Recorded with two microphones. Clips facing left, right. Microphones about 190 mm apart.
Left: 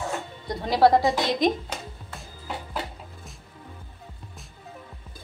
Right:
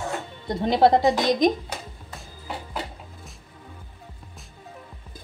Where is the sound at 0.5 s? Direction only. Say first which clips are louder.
Right 1 dB; 25° right (ahead or behind).